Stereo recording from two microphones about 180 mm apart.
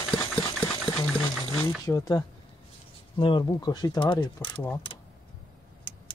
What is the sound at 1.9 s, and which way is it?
Speech, 20° left (ahead or behind).